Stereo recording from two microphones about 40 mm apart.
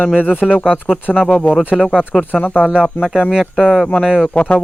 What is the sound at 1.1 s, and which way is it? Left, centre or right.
Speech, left.